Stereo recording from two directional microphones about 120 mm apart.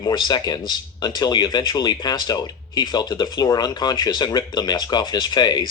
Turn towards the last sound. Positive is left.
turn(degrees=35)  # may be behind; listen again after turning